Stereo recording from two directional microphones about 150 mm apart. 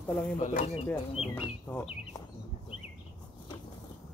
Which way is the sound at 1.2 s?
40° left (ahead or behind).